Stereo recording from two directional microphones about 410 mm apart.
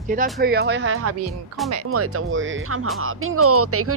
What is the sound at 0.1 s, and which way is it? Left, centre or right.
Speech, centre.